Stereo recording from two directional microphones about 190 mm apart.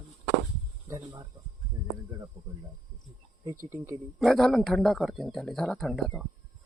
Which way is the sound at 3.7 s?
15° right (ahead or behind).